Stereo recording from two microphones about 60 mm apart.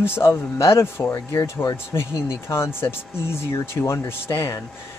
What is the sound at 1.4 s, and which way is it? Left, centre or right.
Speech, left.